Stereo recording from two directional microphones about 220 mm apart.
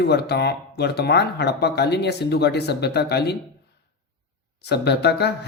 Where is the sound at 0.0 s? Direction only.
50° left (ahead or behind).